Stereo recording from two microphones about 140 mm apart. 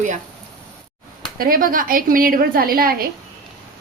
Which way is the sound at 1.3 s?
90° right.